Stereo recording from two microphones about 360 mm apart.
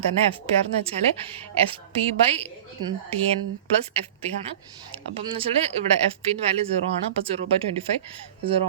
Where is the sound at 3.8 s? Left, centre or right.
Centre.